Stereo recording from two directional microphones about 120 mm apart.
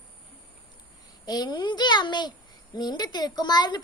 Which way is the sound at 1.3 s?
35° left (ahead or behind).